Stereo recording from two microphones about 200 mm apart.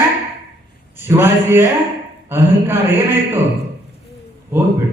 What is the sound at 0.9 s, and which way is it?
A man's voice, 10° right (ahead or behind).